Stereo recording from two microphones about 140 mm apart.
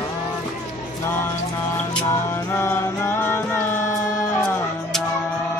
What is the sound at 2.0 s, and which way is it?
Music, 20° left (ahead or behind).